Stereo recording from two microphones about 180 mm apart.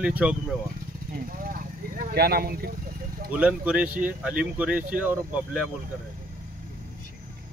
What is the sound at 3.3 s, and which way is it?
Speech, 5° right (ahead or behind).